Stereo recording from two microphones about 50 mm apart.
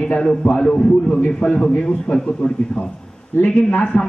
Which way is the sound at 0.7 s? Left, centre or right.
Centre.